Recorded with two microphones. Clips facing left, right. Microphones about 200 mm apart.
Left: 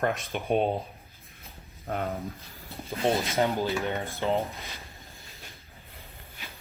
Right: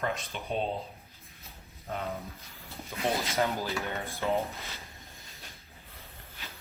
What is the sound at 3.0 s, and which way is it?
Speech, 30° left (ahead or behind).